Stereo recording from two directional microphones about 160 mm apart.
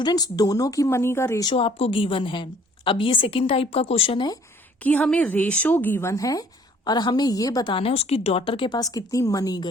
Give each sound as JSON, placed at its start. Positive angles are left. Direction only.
{"t": 0.0, "sound": "a woman's voice", "side_deg": 25}
{"t": 1.5, "sound": "a woman's voice", "side_deg": 35}
{"t": 4.8, "sound": "a woman's voice", "side_deg": 10}